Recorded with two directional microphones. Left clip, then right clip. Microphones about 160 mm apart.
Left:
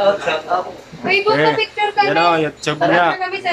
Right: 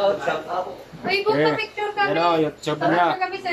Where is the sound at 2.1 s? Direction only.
5° left (ahead or behind).